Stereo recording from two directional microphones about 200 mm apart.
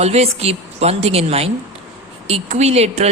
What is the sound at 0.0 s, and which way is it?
A woman's voice, 30° right (ahead or behind).